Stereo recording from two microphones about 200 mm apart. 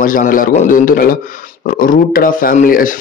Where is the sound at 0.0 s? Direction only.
45° left (ahead or behind).